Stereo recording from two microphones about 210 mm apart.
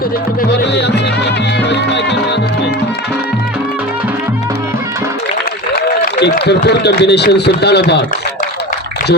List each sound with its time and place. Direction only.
0.5 s music: 55° left (ahead or behind)
5.7 s a man's voice: 50° left (ahead or behind)